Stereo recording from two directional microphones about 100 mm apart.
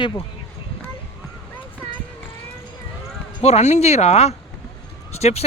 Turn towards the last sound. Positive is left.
turn(degrees=90)